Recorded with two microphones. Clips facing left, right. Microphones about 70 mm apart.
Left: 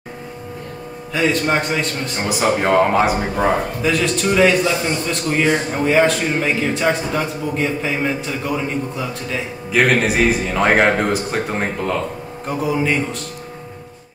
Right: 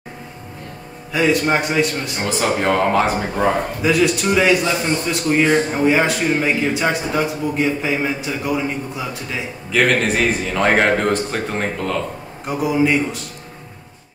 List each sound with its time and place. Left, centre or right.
1.1 s a man's voice: centre
2.2 s a man's voice: centre
3.8 s a man's voice: centre
9.7 s a man's voice: centre
12.4 s a man's voice: centre